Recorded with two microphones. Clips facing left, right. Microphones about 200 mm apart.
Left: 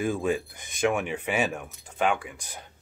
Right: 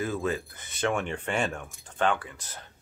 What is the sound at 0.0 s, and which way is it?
Speech, 15° left (ahead or behind).